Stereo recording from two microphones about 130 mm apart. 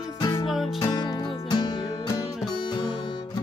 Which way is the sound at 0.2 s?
40° left (ahead or behind).